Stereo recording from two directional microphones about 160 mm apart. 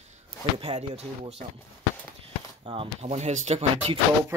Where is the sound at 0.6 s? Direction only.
40° right (ahead or behind).